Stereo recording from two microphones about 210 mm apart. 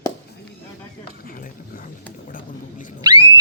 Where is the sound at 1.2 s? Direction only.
40° left (ahead or behind).